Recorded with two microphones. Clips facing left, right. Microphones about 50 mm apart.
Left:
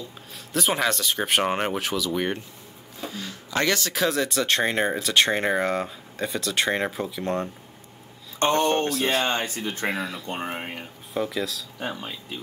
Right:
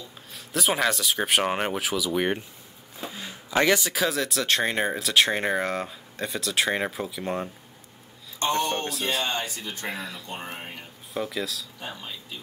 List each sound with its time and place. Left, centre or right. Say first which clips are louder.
0.5 s speech: left 1 dB; centre
3.0 s a sound: left 2 dB; centre
4.0 s speech: left 2 dB; centre
8.4 s speech: left 4 dB; left
9.8 s speech: left 5 dB; centre
10.2 s speech: left 5 dB; left
11.1 s speech: left 3 dB; centre
11.8 s speech: left 10 dB; left